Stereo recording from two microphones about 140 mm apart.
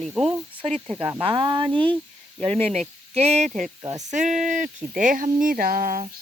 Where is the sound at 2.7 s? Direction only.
50° right (ahead or behind).